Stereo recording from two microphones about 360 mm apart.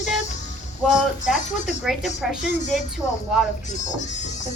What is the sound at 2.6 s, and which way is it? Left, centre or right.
Speech, centre.